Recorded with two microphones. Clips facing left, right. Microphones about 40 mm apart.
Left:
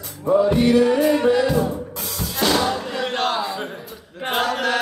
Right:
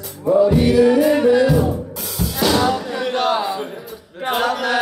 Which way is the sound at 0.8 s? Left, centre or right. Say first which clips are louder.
Right 3 dB; centre.